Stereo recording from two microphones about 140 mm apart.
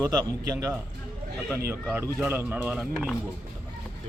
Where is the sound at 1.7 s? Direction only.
15° right (ahead or behind).